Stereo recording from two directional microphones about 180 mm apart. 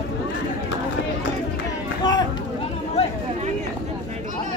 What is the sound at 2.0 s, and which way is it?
Run, 25° left (ahead or behind).